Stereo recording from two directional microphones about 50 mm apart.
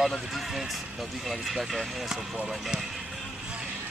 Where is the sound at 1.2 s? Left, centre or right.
Centre.